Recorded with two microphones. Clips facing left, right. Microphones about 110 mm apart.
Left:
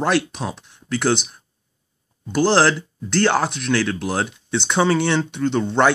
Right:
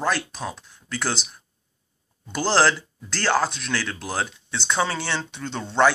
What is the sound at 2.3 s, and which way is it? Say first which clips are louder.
Speech: left 4 dB; 15° left (ahead or behind).